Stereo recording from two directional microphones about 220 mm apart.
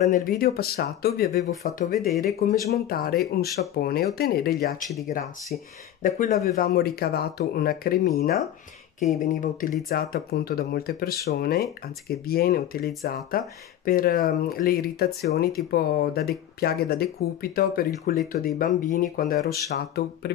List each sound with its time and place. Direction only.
0.0 s speech: 40° left (ahead or behind)
6.0 s speech: 35° left (ahead or behind)